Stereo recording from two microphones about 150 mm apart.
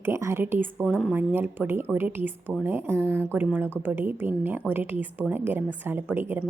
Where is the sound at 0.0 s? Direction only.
15° right (ahead or behind).